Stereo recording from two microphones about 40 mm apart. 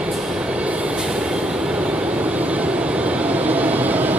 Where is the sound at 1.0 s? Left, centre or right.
Right.